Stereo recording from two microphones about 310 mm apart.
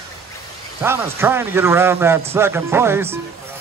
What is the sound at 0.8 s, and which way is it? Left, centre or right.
A man's voice, centre.